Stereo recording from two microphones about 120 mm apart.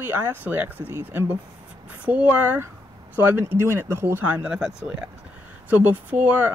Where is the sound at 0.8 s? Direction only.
20° left (ahead or behind).